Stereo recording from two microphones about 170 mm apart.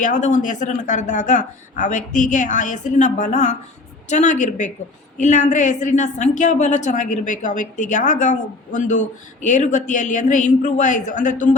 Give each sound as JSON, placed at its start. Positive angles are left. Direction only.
{"t": 0.0, "sound": "a woman's voice", "side_deg": 45}